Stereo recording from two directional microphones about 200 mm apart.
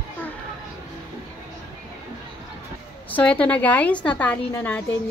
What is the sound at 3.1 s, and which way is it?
A woman's voice, 5° left (ahead or behind).